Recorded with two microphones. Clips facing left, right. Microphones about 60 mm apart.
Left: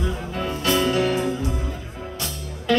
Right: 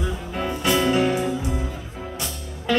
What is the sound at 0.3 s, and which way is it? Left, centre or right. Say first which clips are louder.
Music: right 1 dB; centre.